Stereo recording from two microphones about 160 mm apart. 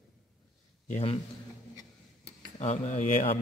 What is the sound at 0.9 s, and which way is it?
Speech, 35° left (ahead or behind).